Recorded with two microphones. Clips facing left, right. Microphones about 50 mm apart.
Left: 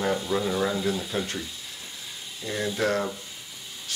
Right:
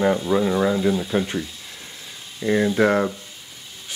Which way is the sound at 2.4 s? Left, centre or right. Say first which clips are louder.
Right 9 dB; right.